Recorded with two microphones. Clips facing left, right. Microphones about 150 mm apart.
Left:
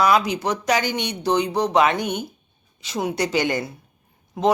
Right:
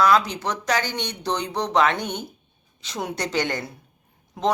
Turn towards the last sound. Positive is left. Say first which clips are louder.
# left 3 dB
turn(degrees=5)  # may be behind; listen again after turning